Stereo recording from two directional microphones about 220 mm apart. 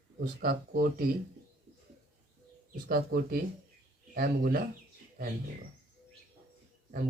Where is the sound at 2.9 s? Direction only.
45° right (ahead or behind).